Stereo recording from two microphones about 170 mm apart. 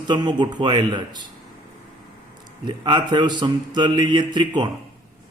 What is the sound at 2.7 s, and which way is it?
A man's voice, 25° right (ahead or behind).